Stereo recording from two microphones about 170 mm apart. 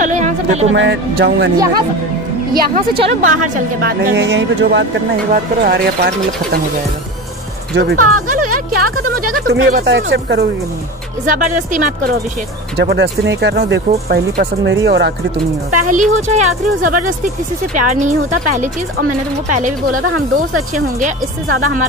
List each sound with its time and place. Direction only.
0.0 s music: 45° right (ahead or behind)
0.7 s speech: 90° right
2.5 s speech: 65° right (ahead or behind)
3.2 s speech: 50° right (ahead or behind)
4.1 s speech: 90° right
5.3 s speech: 55° right (ahead or behind)
7.7 s speech: 60° right (ahead or behind); by 10.4 s 80° right
11.2 s speech: 50° right (ahead or behind)
12.7 s speech: 80° right
14.0 s speech: 65° right (ahead or behind)
15.9 s speech: 45° right (ahead or behind)
19.5 s speech: 50° right (ahead or behind)